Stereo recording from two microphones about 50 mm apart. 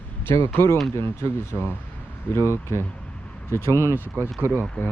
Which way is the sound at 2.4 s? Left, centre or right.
Left.